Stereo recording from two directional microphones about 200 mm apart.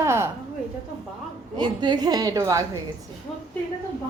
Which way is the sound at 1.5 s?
20° right (ahead or behind).